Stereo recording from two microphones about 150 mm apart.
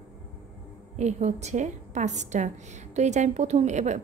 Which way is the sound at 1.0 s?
50° right (ahead or behind).